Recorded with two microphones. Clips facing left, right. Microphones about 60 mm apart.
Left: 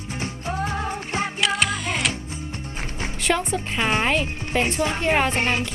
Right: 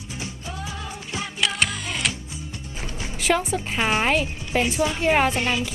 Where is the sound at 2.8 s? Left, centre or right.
Left.